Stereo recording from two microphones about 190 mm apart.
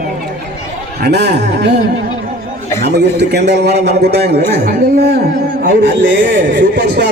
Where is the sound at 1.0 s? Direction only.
60° right (ahead or behind).